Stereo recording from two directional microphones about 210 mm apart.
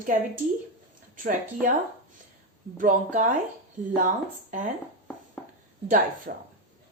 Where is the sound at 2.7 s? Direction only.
40° right (ahead or behind).